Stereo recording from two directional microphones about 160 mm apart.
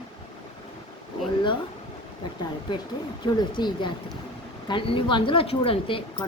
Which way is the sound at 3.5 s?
30° left (ahead or behind).